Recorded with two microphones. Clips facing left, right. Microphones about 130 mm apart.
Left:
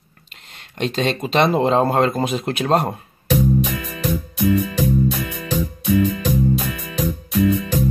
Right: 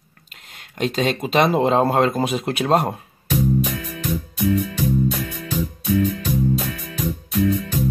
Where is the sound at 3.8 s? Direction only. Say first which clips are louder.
Left 2 dB; 90° left.